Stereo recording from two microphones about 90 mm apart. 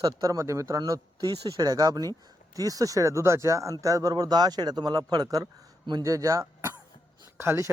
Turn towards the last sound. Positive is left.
turn(degrees=-30)  # may be behind; listen again after turning